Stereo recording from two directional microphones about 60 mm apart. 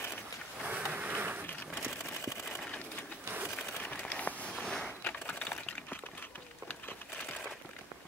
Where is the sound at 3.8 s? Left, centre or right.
Centre.